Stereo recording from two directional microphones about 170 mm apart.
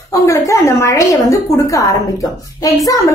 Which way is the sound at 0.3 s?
15° left (ahead or behind).